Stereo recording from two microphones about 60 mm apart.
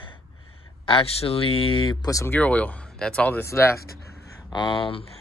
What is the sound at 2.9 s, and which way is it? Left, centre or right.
Speech, centre.